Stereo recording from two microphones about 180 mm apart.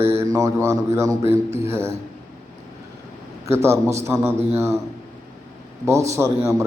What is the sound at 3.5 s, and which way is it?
A man's voice, 15° right (ahead or behind).